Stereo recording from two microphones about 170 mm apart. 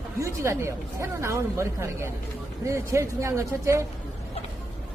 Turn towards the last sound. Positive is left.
turn(degrees=-15)  # may be behind; listen again after turning